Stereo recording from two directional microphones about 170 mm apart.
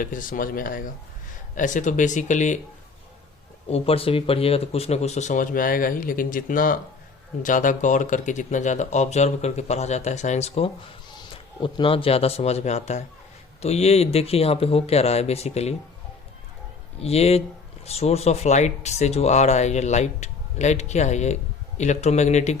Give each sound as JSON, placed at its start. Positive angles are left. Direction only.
{"t": 0.0, "sound": "speech", "side_deg": 55}
{"t": 3.7, "sound": "speech", "side_deg": 35}
{"t": 17.0, "sound": "speech", "side_deg": 35}